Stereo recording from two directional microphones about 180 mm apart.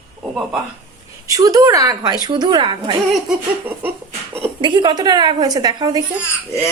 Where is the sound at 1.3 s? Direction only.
20° right (ahead or behind).